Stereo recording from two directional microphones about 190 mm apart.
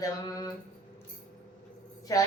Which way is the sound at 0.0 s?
20° left (ahead or behind).